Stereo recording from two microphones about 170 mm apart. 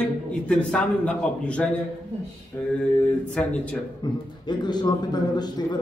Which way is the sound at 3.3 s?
5° left (ahead or behind).